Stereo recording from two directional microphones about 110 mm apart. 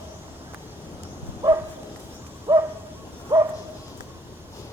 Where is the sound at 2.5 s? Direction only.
30° right (ahead or behind).